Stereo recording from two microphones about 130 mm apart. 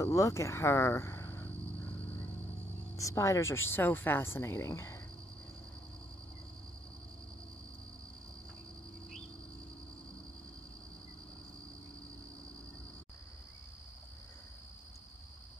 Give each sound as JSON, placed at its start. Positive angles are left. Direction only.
{"t": 0.0, "sound": "speech", "side_deg": 25}
{"t": 3.0, "sound": "speech", "side_deg": 25}